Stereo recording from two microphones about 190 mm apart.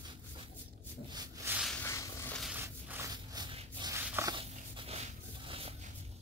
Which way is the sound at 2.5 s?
10° right (ahead or behind).